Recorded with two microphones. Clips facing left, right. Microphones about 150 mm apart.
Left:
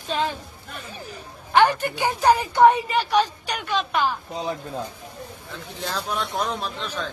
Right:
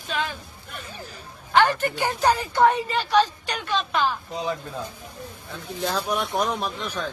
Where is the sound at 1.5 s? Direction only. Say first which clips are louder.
Left 1 dB; 15° left (ahead or behind).